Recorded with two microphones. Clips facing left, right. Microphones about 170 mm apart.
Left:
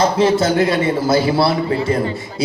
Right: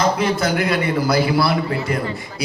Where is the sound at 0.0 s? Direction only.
25° left (ahead or behind).